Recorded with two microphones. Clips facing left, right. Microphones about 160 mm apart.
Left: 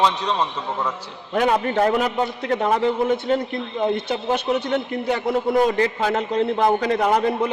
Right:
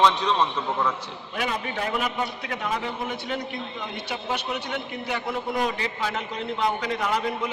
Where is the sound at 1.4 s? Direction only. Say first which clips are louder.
Left 10 dB; 50° left (ahead or behind).